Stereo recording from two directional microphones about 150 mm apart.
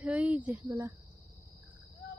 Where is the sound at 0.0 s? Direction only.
10° right (ahead or behind).